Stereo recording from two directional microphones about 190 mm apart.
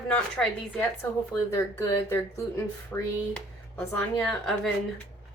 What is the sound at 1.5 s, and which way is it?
Speech, 15° left (ahead or behind).